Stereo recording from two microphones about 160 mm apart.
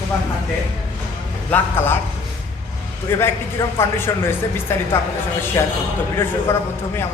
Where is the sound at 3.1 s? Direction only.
15° left (ahead or behind).